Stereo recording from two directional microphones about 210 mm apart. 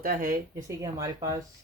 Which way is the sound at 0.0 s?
40° right (ahead or behind).